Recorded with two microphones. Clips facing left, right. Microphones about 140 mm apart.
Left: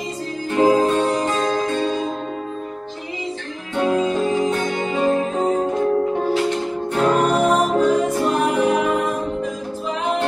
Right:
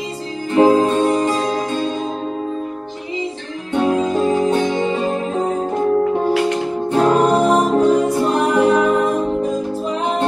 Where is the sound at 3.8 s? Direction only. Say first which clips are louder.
Right 1 dB; 35° right (ahead or behind).